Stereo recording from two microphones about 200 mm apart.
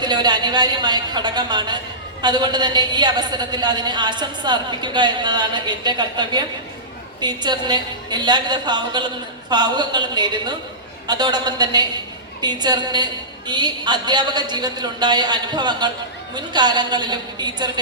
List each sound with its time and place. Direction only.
0.0 s a woman's voice: 20° right (ahead or behind)